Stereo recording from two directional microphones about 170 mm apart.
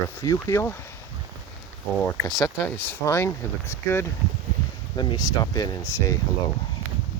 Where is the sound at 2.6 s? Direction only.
10° left (ahead or behind).